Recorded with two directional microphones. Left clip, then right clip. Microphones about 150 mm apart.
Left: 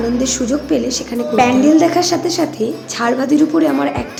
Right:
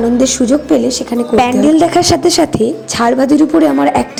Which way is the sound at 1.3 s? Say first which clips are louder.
Right 1 dB; 65° right (ahead or behind).